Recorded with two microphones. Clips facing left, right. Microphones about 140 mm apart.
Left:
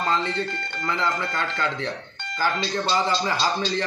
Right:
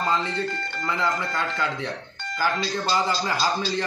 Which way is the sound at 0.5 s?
25° left (ahead or behind).